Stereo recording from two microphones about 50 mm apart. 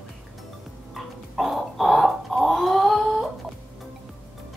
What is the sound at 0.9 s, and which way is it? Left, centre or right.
Chicken, centre.